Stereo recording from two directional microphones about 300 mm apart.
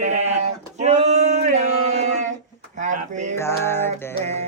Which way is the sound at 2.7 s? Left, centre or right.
Right.